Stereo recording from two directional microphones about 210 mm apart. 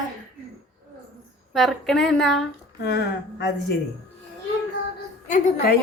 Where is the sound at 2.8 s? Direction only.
50° left (ahead or behind).